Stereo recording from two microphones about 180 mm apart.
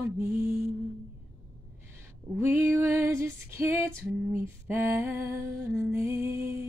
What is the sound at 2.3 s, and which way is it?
Female singing, 15° right (ahead or behind).